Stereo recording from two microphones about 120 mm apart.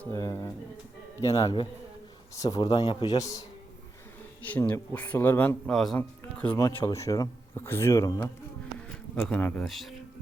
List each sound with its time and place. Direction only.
0.1 s a man's voice: 25° left (ahead or behind)
3.2 s speech: 30° left (ahead or behind)
4.7 s speech: 15° left (ahead or behind)
5.6 s a man's voice: 5° left (ahead or behind)
6.7 s speech: 25° left (ahead or behind)
9.2 s speech: 10° left (ahead or behind)